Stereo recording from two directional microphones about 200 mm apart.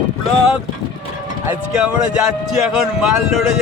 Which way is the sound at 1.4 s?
5° right (ahead or behind).